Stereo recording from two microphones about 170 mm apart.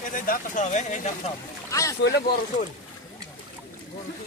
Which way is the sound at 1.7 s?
20° left (ahead or behind).